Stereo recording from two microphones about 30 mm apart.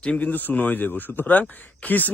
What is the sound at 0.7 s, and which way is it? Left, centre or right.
Speech, left.